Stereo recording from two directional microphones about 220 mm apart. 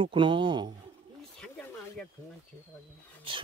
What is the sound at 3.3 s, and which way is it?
Speech, 25° right (ahead or behind).